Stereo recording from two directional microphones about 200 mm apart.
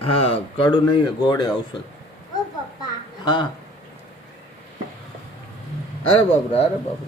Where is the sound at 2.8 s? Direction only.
20° left (ahead or behind).